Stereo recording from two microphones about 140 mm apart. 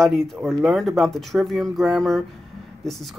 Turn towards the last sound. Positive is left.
turn(degrees=0)  # may be behind; listen again after turning